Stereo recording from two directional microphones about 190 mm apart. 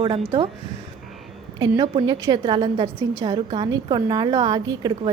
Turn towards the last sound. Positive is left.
turn(degrees=-25)  # may be behind; listen again after turning